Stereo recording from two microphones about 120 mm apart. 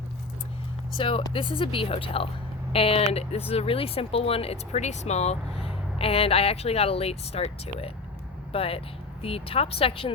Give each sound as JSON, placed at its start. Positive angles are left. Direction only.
{"t": 0.9, "sound": "a woman's voice", "side_deg": 45}